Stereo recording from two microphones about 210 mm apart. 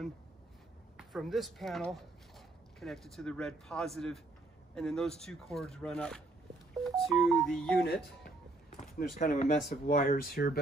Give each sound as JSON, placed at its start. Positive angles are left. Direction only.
{"t": 0.9, "sound": "speech", "side_deg": 0}
{"t": 7.8, "sound": "speech", "side_deg": 50}
{"t": 8.6, "sound": "a sound", "side_deg": 35}
{"t": 9.6, "sound": "speech", "side_deg": 45}